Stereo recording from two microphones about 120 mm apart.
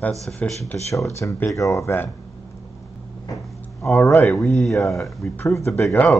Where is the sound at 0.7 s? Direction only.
25° left (ahead or behind).